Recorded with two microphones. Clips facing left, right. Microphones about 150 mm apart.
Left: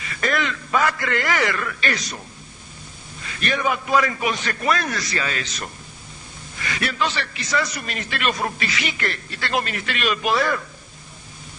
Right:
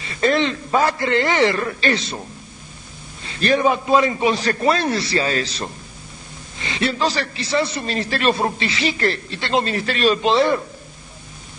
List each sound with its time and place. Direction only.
0.0 s a man's voice: 30° right (ahead or behind)
3.2 s a man's voice: 30° right (ahead or behind)